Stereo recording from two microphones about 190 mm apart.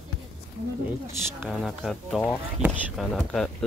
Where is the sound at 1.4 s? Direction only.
Centre (ahead or behind).